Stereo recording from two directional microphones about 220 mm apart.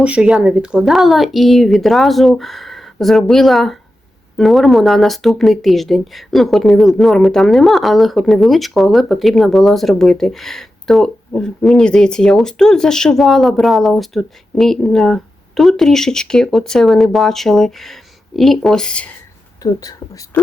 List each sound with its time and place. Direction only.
0.0 s speech: 5° right (ahead or behind)
19.6 s speech: 15° left (ahead or behind)